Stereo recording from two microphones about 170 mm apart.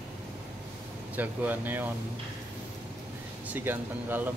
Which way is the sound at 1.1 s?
10° right (ahead or behind).